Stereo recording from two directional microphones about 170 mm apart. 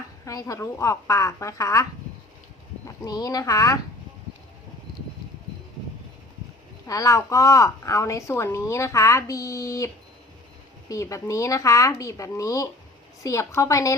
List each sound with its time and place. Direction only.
0.3 s a woman's voice: 20° left (ahead or behind)
6.8 s a woman's voice: 20° left (ahead or behind)